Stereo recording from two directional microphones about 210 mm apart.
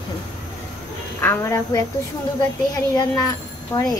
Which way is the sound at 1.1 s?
10° left (ahead or behind).